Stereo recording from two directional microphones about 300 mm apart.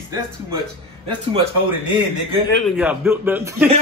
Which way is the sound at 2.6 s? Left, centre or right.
Centre.